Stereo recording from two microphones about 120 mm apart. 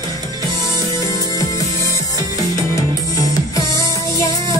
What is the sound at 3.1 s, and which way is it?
Music, 30° left (ahead or behind).